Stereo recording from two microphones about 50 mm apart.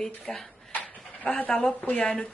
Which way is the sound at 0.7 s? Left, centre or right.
Left.